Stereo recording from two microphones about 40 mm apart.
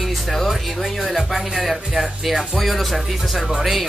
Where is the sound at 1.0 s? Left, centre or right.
Centre.